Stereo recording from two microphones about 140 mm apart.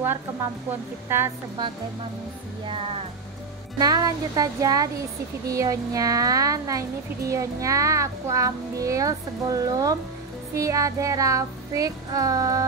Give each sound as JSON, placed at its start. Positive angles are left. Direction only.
{"t": 1.0, "sound": "a woman's voice", "side_deg": -15}
{"t": 3.7, "sound": "speech", "side_deg": -25}